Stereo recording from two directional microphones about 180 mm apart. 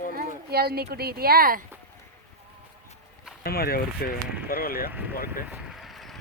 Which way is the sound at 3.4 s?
55° left (ahead or behind).